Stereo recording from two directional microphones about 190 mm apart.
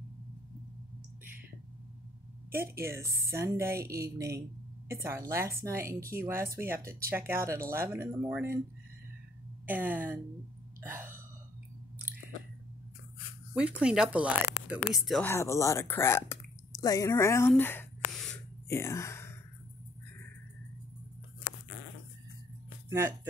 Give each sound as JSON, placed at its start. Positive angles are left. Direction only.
{"t": 2.5, "sound": "a woman's voice", "side_deg": -15}
{"t": 9.7, "sound": "speech", "side_deg": -10}
{"t": 10.8, "sound": "burping", "side_deg": -10}
{"t": 13.6, "sound": "speech", "side_deg": -5}
{"t": 15.2, "sound": "speech", "side_deg": 15}
{"t": 22.8, "sound": "speech", "side_deg": -15}